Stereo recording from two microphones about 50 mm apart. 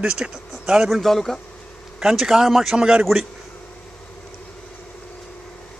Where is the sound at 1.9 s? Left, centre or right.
Centre.